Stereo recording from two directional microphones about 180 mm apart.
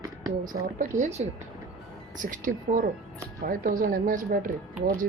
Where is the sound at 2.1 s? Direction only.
45° right (ahead or behind).